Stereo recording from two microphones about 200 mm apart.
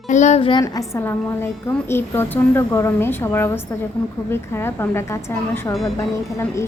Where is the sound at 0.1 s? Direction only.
35° left (ahead or behind).